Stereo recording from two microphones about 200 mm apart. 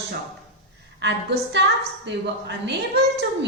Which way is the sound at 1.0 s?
60° right (ahead or behind).